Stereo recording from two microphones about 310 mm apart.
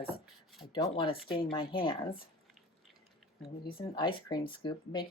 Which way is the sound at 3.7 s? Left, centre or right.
Centre.